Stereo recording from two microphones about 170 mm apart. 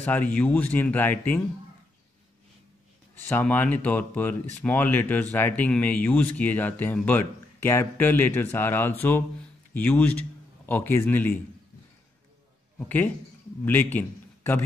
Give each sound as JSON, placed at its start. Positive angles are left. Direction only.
{"t": 0.0, "sound": "speech", "side_deg": 10}
{"t": 3.3, "sound": "speech", "side_deg": 10}
{"t": 12.7, "sound": "a man's voice", "side_deg": 10}